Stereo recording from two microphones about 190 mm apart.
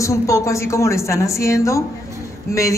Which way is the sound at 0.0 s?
15° left (ahead or behind).